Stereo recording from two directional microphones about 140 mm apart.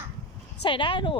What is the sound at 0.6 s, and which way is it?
Speech, 35° left (ahead or behind).